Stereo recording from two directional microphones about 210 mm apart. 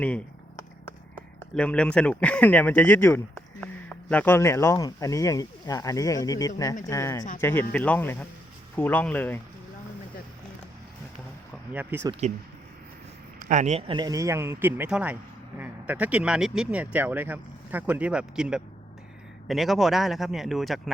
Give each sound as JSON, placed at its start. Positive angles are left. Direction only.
{"t": 0.0, "sound": "a sound", "side_deg": 10}
{"t": 1.5, "sound": "speech", "side_deg": 5}
{"t": 11.7, "sound": "speech", "side_deg": -10}
{"t": 12.2, "sound": "speech", "side_deg": -35}
{"t": 13.4, "sound": "speech", "side_deg": -35}